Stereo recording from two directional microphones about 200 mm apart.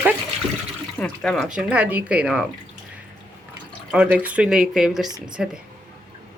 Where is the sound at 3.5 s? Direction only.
5° right (ahead or behind).